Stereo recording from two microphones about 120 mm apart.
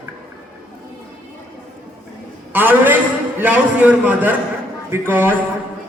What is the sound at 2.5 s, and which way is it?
A man's voice, 15° right (ahead or behind).